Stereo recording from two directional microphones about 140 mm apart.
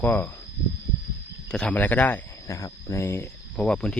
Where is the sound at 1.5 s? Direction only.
10° left (ahead or behind).